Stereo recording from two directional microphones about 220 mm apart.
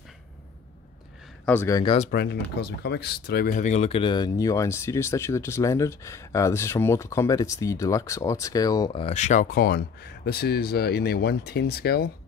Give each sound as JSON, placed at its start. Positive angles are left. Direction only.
{"t": 1.4, "sound": "speech", "side_deg": 10}
{"t": 2.0, "sound": "speech", "side_deg": 45}